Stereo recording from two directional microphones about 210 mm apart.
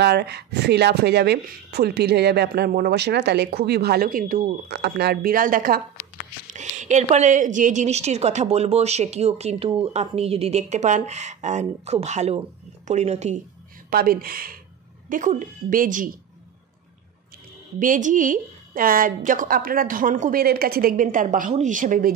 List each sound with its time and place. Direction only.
0.0 s a woman's voice: 55° right (ahead or behind); by 13.4 s 35° right (ahead or behind)
13.8 s a woman's voice: 45° right (ahead or behind)
17.7 s a woman's voice: 40° right (ahead or behind)